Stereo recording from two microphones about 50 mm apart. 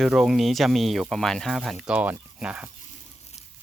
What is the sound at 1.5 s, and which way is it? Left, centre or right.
Speech, centre.